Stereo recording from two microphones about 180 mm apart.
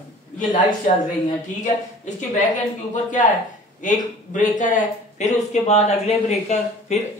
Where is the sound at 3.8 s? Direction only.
45° left (ahead or behind).